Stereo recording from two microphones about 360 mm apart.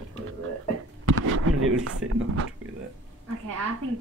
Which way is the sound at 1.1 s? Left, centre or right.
Right.